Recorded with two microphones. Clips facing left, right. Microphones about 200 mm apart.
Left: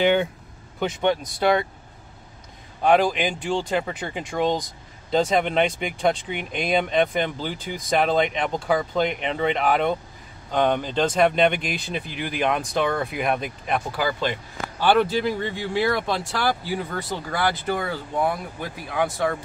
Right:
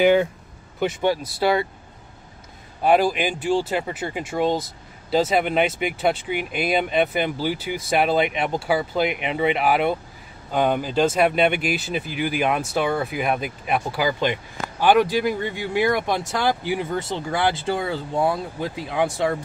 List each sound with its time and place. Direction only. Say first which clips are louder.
0.0 s speech: right 3 dB; 5° right (ahead or behind)
2.8 s speech: right 1 dB; 5° right (ahead or behind); by 19.3 s 25° right (ahead or behind)